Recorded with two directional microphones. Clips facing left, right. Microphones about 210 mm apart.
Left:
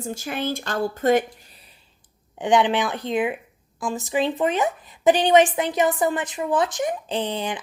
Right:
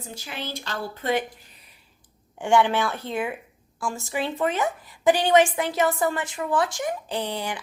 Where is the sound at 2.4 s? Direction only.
20° left (ahead or behind).